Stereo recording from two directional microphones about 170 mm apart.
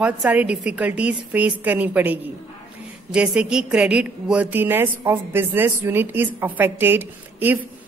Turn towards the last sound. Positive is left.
turn(degrees=-10)  # may be behind; listen again after turning